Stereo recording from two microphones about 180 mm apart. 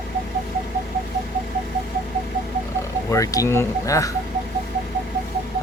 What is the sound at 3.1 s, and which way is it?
Speech, 20° left (ahead or behind).